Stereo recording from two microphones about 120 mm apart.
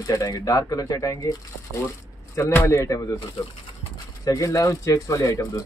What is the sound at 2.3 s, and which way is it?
Speech, 25° left (ahead or behind).